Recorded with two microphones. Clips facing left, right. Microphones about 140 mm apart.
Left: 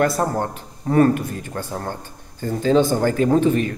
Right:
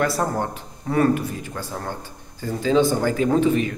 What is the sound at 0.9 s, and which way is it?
Speech, 40° left (ahead or behind).